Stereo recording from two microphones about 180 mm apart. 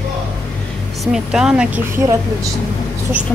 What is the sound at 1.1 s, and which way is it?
Speech, 5° right (ahead or behind).